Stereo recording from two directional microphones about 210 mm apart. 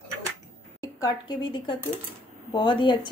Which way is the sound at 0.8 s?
15° left (ahead or behind).